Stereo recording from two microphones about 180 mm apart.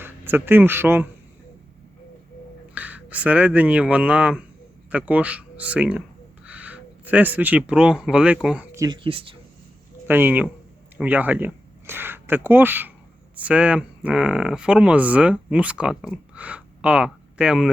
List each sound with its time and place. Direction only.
0.0 s speech: 10° right (ahead or behind)
2.7 s speech: 10° right (ahead or behind)
8.7 s a sound: 20° right (ahead or behind)
9.0 s speech: 30° right (ahead or behind)
10.1 s speech: 10° right (ahead or behind)